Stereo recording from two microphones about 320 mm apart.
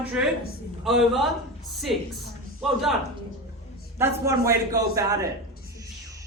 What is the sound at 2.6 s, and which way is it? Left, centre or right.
Speech, centre.